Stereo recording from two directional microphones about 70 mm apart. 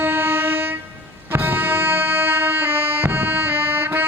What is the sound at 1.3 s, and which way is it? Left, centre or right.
Music, right.